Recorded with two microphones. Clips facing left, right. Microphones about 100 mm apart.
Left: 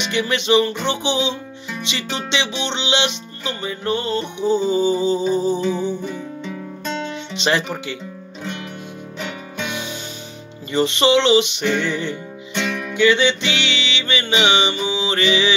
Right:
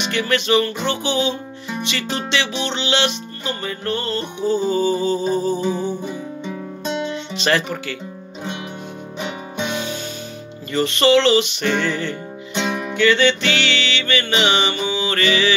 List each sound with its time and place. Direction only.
0.1 s music: 20° left (ahead or behind)
5.7 s music: 45° right (ahead or behind)
6.0 s music: 15° right (ahead or behind)
7.3 s music: 20° left (ahead or behind)
10.7 s music: 20° left (ahead or behind)
12.5 s music: 20° right (ahead or behind)
12.9 s music: 15° left (ahead or behind)